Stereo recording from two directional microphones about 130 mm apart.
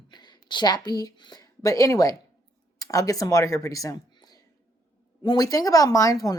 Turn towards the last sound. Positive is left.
turn(degrees=25)  # may be behind; listen again after turning